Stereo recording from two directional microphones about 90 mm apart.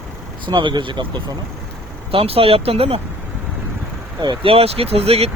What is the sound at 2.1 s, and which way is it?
Speech, 90° right.